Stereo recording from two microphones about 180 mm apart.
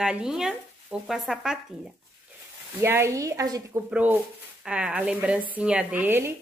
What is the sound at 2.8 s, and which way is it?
A woman's voice, 15° right (ahead or behind).